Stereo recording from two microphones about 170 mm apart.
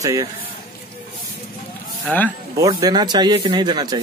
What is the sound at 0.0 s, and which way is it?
Speech, 20° right (ahead or behind).